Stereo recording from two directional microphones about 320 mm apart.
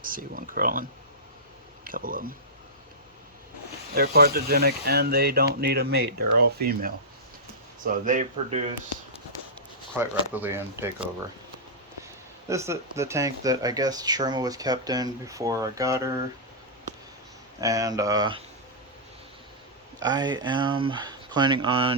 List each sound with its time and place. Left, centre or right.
0.0 s speech: right
3.9 s speech: right
10.0 s speech: centre
12.5 s speech: centre
17.6 s speech: centre
20.0 s speech: centre